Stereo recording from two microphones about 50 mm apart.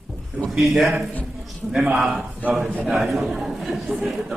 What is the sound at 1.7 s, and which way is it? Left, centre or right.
Speech, centre.